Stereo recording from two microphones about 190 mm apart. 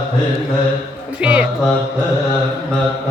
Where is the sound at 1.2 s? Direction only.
5° right (ahead or behind).